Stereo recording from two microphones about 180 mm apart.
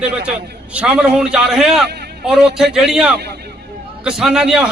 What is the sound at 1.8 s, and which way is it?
Speech, 65° right (ahead or behind).